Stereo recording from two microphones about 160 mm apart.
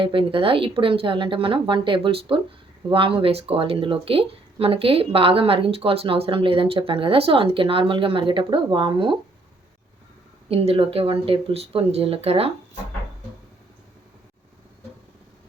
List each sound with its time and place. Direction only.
0.0 s speech: 35° right (ahead or behind)
10.5 s speech: 35° right (ahead or behind)